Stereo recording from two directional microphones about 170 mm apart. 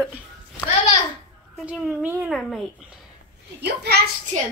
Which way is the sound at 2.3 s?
Centre (ahead or behind).